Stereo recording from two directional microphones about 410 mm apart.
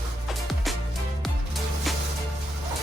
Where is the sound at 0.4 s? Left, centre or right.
Centre.